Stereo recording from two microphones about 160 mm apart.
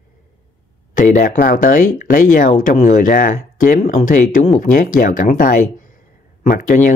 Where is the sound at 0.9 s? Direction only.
55° left (ahead or behind).